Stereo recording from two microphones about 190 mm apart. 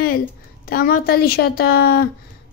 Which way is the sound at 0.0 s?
50° left (ahead or behind).